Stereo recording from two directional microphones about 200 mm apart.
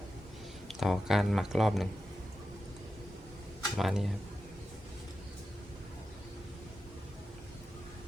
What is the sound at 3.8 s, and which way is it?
Speech, centre (ahead or behind).